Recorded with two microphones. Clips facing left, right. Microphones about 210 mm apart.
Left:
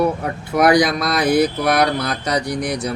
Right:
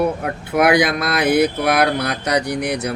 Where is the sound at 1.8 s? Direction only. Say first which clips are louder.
Right 1 dB; 65° right (ahead or behind).